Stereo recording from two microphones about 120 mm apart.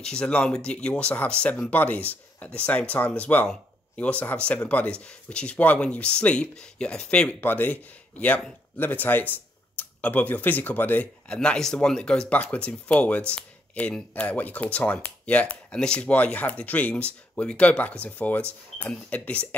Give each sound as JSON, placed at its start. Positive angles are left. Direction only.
{"t": 0.0, "sound": "speech", "side_deg": 5}